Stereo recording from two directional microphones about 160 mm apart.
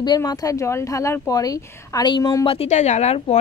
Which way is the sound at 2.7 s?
45° left (ahead or behind).